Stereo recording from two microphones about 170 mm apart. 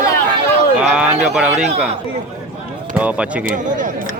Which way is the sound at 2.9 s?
5° right (ahead or behind).